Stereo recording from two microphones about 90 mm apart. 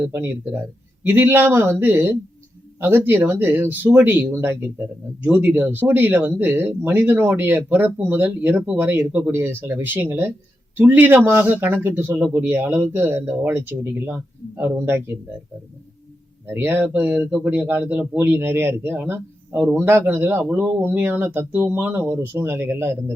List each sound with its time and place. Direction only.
0.0 s speech: 25° right (ahead or behind)
16.5 s speech: 25° right (ahead or behind)
20.9 s speech: 25° right (ahead or behind)